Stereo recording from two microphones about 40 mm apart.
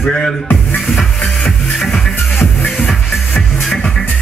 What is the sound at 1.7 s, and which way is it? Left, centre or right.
Music, centre.